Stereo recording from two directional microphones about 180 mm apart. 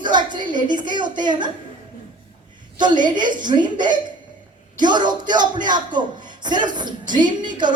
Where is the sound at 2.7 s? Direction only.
25° right (ahead or behind).